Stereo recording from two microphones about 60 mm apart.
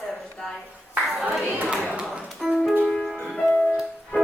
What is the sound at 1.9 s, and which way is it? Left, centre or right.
Music, centre.